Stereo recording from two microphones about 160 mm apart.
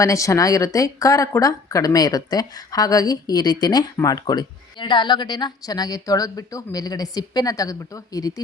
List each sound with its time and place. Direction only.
0.0 s speech: 20° left (ahead or behind)